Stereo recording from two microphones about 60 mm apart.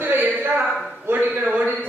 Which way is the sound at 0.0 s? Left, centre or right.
Right.